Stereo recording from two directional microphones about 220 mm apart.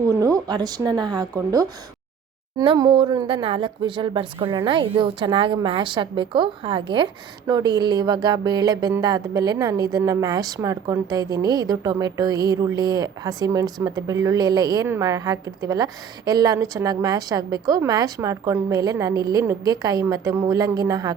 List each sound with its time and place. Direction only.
0.2 s a woman's voice: 15° right (ahead or behind)